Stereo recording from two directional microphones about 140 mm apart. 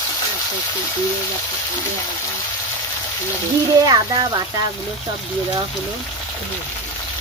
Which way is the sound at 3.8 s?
30° right (ahead or behind).